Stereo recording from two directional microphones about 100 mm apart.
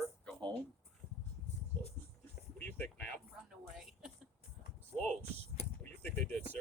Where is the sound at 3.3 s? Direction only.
5° right (ahead or behind).